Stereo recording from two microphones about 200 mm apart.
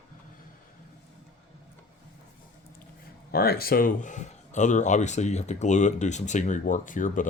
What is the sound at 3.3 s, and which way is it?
Speech, 50° left (ahead or behind).